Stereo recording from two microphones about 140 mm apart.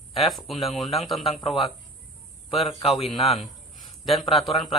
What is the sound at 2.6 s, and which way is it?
Speech, 40° left (ahead or behind).